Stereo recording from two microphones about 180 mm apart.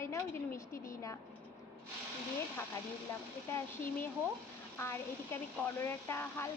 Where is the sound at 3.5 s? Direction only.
10° left (ahead or behind).